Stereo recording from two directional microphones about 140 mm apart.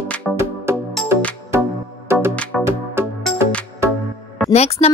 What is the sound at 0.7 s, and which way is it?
Music, 20° right (ahead or behind).